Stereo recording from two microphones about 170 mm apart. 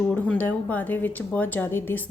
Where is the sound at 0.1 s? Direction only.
10° left (ahead or behind).